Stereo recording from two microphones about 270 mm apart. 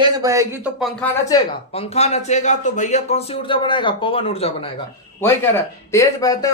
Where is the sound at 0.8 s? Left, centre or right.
Centre.